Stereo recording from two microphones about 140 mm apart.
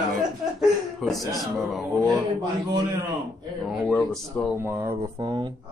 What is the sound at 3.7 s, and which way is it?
Speech, centre (ahead or behind).